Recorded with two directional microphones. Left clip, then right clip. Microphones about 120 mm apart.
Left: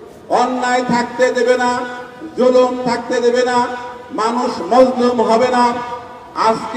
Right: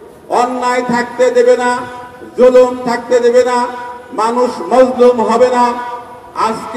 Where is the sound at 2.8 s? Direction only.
25° right (ahead or behind).